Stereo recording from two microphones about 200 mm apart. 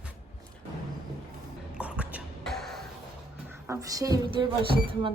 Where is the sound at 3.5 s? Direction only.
15° right (ahead or behind).